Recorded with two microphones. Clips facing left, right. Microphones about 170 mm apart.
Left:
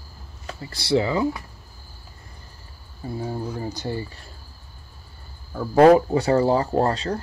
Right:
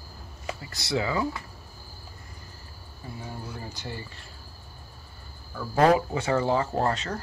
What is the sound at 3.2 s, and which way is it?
Speech, 40° left (ahead or behind).